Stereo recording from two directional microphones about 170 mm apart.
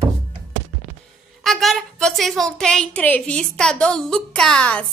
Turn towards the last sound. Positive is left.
turn(degrees=5)  # may be behind; listen again after turning